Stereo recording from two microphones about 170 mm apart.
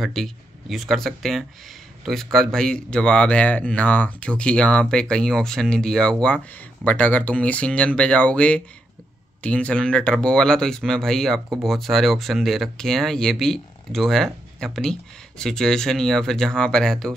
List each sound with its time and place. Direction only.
0.0 s speech: centre (ahead or behind)